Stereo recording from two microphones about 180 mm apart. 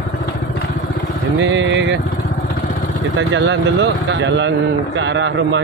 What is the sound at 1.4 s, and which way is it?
Vehicle, 90° right.